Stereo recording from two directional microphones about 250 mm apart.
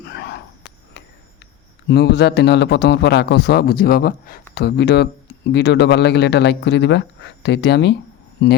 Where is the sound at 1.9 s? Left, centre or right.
Left.